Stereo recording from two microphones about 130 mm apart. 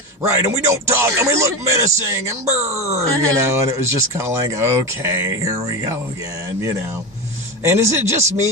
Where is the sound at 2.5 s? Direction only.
55° right (ahead or behind).